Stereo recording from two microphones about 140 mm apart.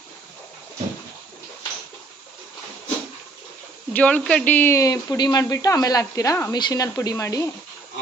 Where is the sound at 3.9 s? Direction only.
10° left (ahead or behind).